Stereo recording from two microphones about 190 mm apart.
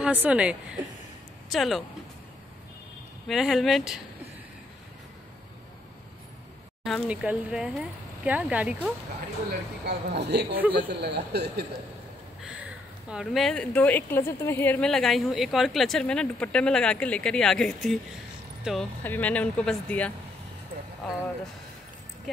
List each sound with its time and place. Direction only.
0.0 s a woman's voice: 5° right (ahead or behind)
3.3 s a woman's voice: centre (ahead or behind)
6.8 s a woman's voice: 5° right (ahead or behind)
9.5 s speech: 60° right (ahead or behind)
12.4 s a woman's voice: 5° right (ahead or behind)
19.0 s speech: 10° left (ahead or behind)